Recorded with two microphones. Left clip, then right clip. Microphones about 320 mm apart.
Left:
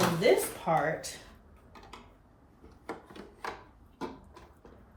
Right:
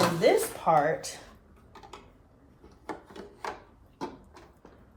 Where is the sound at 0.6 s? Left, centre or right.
Centre.